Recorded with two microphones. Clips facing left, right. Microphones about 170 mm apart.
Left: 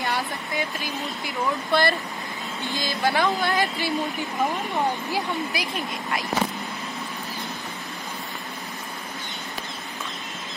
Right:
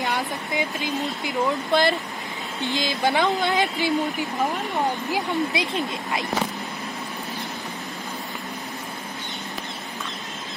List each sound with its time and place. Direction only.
0.0 s speech: 20° right (ahead or behind)
5.1 s speech: 20° right (ahead or behind)